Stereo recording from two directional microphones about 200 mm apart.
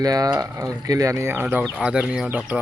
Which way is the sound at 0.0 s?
20° right (ahead or behind).